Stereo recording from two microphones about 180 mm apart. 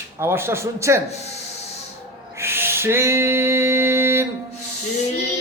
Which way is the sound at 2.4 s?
15° right (ahead or behind).